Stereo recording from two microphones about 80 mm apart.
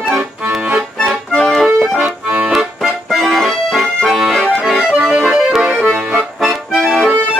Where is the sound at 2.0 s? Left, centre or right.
Centre.